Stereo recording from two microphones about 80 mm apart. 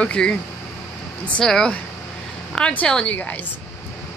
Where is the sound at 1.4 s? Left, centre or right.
Centre.